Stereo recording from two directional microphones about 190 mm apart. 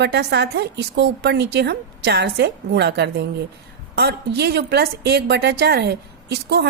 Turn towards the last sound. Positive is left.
turn(degrees=-60)  # may be behind; listen again after turning